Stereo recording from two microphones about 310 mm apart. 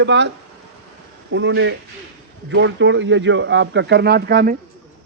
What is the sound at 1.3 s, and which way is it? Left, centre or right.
Speech, right.